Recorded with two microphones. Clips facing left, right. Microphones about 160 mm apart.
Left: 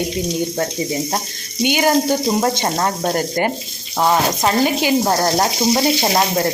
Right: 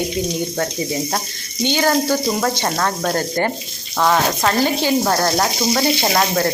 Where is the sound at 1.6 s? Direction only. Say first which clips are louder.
Left 2 dB; 15° left (ahead or behind).